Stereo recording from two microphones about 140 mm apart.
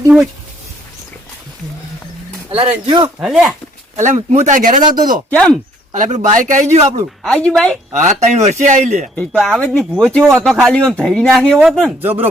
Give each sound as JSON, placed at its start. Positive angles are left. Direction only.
{"t": 2.6, "sound": "speech", "side_deg": -35}
{"t": 3.2, "sound": "speech", "side_deg": -5}
{"t": 3.9, "sound": "speech", "side_deg": -55}
{"t": 5.3, "sound": "speech", "side_deg": 5}
{"t": 5.9, "sound": "speech", "side_deg": -60}
{"t": 7.3, "sound": "speech", "side_deg": 5}
{"t": 7.9, "sound": "speech", "side_deg": -55}
{"t": 9.3, "sound": "speech", "side_deg": 0}
{"t": 9.6, "sound": "speech", "side_deg": 10}
{"t": 12.0, "sound": "speech", "side_deg": -15}